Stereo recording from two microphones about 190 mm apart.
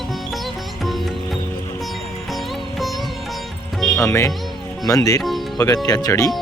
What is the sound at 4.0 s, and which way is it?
Speech, 15° left (ahead or behind).